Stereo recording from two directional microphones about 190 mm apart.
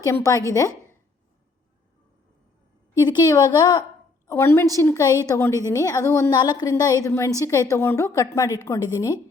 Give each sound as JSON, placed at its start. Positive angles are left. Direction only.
{"t": 0.0, "sound": "a woman's voice", "side_deg": 15}
{"t": 3.0, "sound": "a woman's voice", "side_deg": 20}